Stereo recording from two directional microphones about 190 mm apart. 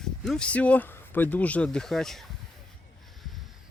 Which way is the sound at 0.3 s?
5° left (ahead or behind).